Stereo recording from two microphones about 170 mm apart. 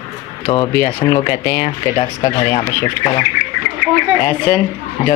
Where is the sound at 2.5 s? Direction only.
20° left (ahead or behind).